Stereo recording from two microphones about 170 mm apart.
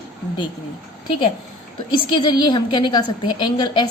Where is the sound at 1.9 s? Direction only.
25° left (ahead or behind).